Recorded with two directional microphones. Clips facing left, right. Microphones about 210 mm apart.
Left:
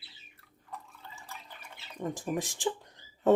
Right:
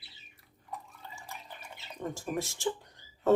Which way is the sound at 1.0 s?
15° right (ahead or behind).